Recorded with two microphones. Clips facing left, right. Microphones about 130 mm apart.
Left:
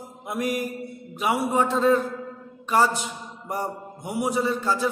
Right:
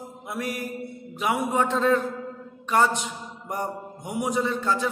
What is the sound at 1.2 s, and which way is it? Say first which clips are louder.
A man's voice: left 1 dB; 5° left (ahead or behind).